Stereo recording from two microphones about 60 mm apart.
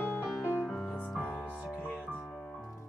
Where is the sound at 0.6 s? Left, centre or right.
Centre.